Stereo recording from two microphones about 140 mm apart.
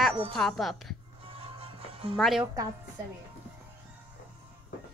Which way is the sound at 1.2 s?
40° right (ahead or behind).